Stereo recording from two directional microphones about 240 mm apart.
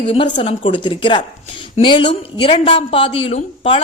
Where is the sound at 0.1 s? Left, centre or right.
Left.